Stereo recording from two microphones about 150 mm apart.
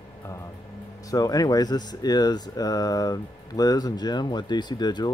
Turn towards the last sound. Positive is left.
turn(degrees=30)  # may be behind; listen again after turning